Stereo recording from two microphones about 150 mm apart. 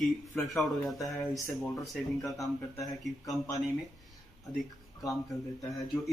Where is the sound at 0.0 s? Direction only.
Centre (ahead or behind).